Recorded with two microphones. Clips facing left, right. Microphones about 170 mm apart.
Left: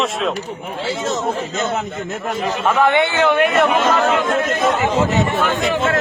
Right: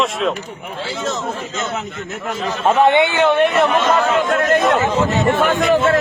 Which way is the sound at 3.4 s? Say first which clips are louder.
Even; centre (ahead or behind).